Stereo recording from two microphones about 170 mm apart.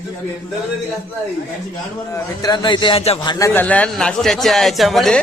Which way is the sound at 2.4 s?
25° left (ahead or behind).